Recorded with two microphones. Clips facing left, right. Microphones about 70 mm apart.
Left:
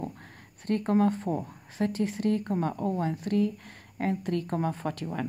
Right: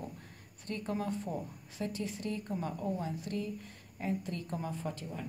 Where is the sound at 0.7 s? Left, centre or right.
Left.